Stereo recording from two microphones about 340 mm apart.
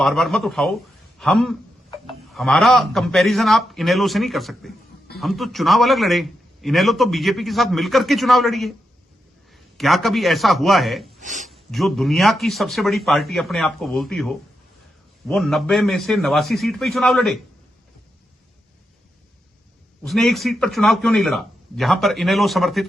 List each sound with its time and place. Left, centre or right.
0.0 s a man's voice: centre
11.2 s speech: right
11.4 s a man's voice: centre
20.1 s a man's voice: centre